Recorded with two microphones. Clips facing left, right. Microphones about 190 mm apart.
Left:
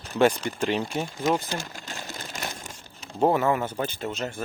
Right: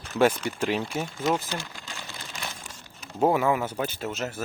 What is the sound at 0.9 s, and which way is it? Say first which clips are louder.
Speech: left 1 dB; 10° left (ahead or behind).